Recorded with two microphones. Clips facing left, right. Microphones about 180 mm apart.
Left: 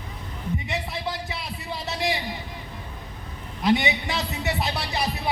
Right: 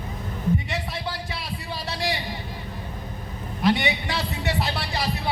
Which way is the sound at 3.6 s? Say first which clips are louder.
Even; 20° left (ahead or behind).